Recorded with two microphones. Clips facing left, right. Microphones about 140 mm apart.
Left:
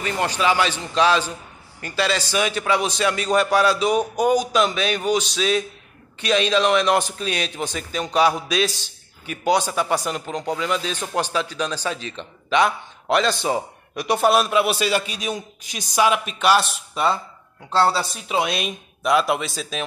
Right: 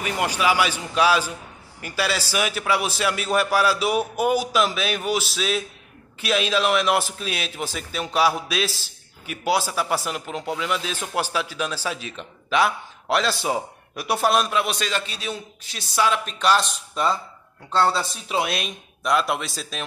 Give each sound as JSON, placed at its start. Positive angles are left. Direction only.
{"t": 0.0, "sound": "a man's voice", "side_deg": -10}
{"t": 16.3, "sound": "a man's voice", "side_deg": 5}
{"t": 17.6, "sound": "speech", "side_deg": 30}
{"t": 17.9, "sound": "a man's voice", "side_deg": 0}